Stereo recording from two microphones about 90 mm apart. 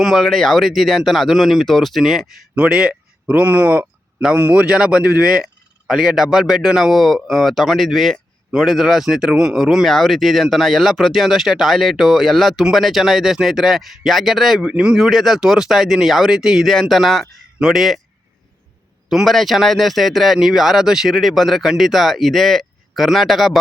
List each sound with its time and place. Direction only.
0.0 s a man's voice: centre (ahead or behind)
2.6 s a man's voice: 10° right (ahead or behind)
19.1 s a man's voice: centre (ahead or behind)